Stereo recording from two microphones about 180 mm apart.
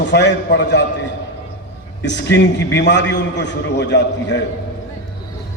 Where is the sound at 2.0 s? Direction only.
75° left (ahead or behind).